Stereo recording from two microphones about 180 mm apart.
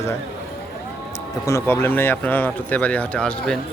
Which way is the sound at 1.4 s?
15° left (ahead or behind).